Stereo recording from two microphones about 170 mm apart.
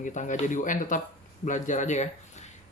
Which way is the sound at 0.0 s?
45° left (ahead or behind).